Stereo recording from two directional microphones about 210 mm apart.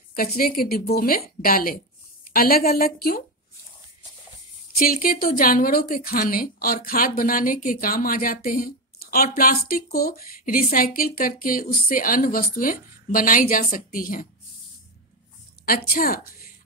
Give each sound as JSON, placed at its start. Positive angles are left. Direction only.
{"t": 0.1, "sound": "a woman's voice", "side_deg": 45}
{"t": 4.7, "sound": "a woman's voice", "side_deg": 40}
{"t": 15.6, "sound": "a woman's voice", "side_deg": 45}